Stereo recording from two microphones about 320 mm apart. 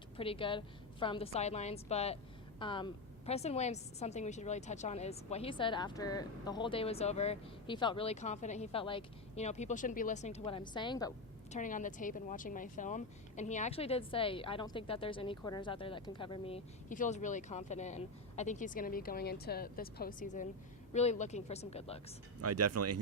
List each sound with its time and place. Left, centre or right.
0.2 s a woman's voice: centre
11.5 s speech: left
22.4 s speech: right